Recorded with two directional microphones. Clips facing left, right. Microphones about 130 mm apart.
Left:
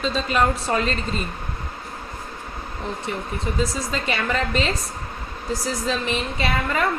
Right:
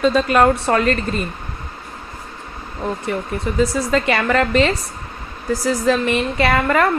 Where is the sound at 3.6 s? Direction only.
65° right (ahead or behind).